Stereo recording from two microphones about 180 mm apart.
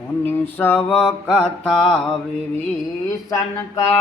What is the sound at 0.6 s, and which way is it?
Mantra, 10° left (ahead or behind).